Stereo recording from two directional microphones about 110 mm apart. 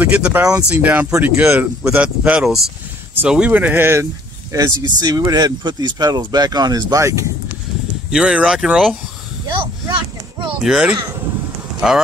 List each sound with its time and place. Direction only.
0.0 s speech: 15° right (ahead or behind)
0.4 s speech: 30° right (ahead or behind)
0.7 s speech: 15° right (ahead or behind)
8.1 s speech: 5° right (ahead or behind)
9.5 s a sound: 50° right (ahead or behind)
10.6 s speech: 5° right (ahead or behind)